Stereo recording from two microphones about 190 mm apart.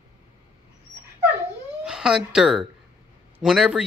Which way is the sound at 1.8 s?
5° right (ahead or behind).